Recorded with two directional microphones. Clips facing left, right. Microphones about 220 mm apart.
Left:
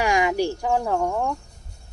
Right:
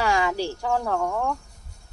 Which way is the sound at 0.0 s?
15° left (ahead or behind).